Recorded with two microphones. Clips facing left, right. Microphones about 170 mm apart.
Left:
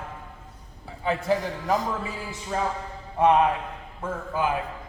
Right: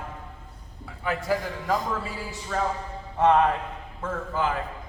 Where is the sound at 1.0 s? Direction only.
25° left (ahead or behind).